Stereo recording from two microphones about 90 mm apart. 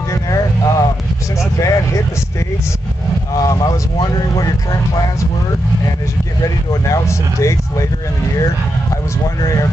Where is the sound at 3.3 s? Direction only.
45° left (ahead or behind).